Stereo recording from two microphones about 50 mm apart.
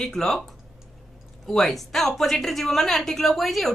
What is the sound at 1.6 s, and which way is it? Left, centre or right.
Speech, centre.